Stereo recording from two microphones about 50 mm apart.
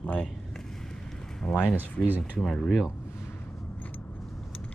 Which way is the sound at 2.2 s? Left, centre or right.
Centre.